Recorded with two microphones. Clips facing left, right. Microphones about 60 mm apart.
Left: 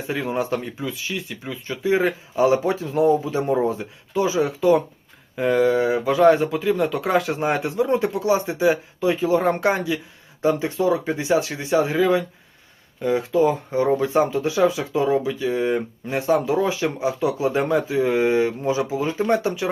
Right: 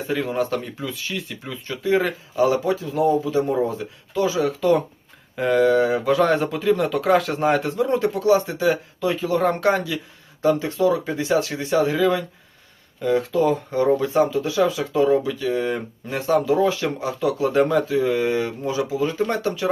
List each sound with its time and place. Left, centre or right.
0.1 s speech: centre
2.0 s speech: left
5.4 s speech: centre
14.1 s speech: left